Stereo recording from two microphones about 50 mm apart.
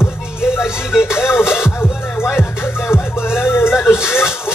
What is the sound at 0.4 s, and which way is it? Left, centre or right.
Music, centre.